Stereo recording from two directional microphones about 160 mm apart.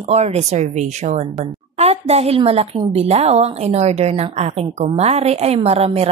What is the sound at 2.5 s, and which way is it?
A woman's voice, 40° right (ahead or behind).